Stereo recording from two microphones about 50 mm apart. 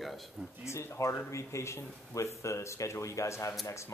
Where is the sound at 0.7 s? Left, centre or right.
Left.